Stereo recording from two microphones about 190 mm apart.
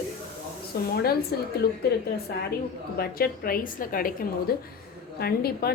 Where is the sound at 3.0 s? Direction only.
55° left (ahead or behind).